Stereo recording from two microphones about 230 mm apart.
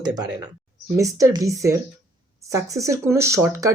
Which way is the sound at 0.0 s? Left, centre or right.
Centre.